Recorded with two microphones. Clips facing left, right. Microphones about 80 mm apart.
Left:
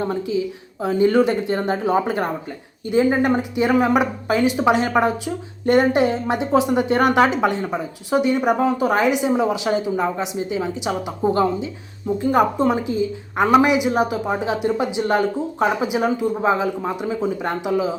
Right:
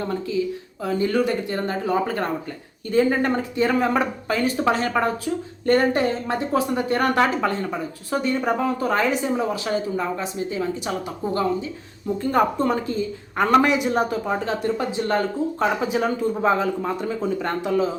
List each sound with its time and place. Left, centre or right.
0.0 s a woman's voice: centre
12.0 s a woman's voice: centre